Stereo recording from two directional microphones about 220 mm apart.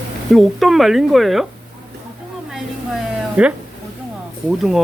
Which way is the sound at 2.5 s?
Centre (ahead or behind).